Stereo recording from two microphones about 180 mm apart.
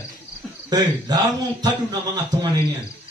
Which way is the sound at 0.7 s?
20° right (ahead or behind).